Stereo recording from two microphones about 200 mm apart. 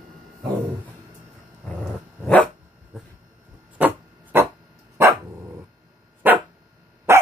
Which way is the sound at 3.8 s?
10° right (ahead or behind).